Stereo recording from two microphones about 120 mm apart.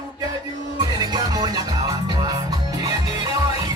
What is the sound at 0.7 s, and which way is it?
Music, 35° right (ahead or behind).